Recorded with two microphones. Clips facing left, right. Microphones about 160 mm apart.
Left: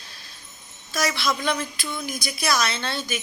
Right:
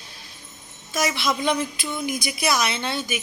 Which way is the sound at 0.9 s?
15° right (ahead or behind).